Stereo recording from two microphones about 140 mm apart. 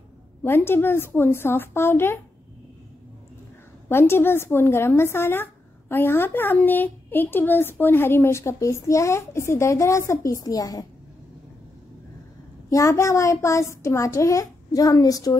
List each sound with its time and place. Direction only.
0.4 s a woman's voice: 15° left (ahead or behind)
3.9 s a woman's voice: 15° left (ahead or behind)
12.6 s speech: 20° left (ahead or behind)